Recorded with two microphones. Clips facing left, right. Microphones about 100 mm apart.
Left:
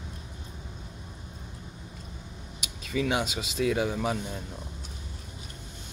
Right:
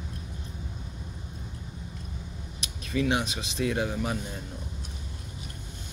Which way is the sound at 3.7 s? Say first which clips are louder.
Left 1 dB; 85° left.